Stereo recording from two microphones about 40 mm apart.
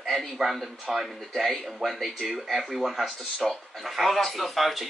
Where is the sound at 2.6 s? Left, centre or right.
Centre.